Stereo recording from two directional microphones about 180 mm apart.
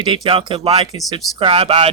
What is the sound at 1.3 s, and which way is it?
Speech, 30° right (ahead or behind).